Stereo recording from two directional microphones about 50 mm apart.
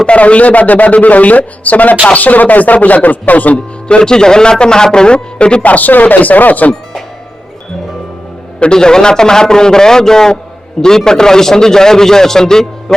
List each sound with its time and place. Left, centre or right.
0.0 s a man's voice: left
3.8 s a man's voice: centre
5.6 s speech: left
8.5 s a man's voice: centre